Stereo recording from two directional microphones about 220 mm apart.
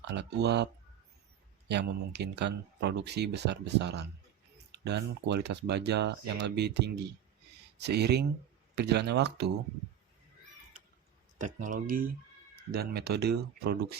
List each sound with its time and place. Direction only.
0.0 s speech: 50° right (ahead or behind)
11.3 s speech: 35° right (ahead or behind)